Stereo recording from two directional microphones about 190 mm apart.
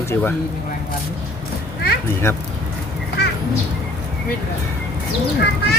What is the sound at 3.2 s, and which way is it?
Crow, 60° left (ahead or behind).